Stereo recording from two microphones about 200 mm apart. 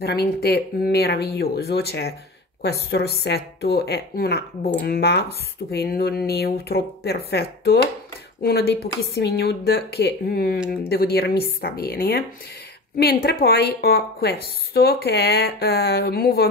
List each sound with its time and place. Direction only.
0.0 s a woman's voice: 55° left (ahead or behind)